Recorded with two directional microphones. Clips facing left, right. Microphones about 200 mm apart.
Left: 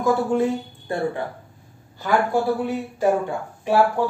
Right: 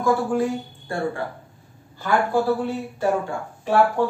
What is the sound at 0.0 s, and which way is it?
A woman's voice, 20° left (ahead or behind).